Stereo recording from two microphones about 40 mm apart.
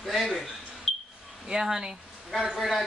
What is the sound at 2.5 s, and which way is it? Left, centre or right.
Speech, centre.